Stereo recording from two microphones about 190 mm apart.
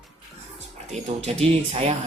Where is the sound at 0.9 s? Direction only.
35° right (ahead or behind).